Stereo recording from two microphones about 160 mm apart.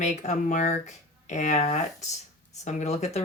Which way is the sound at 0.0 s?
50° left (ahead or behind).